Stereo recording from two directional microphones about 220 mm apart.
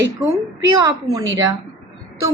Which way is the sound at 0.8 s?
15° right (ahead or behind).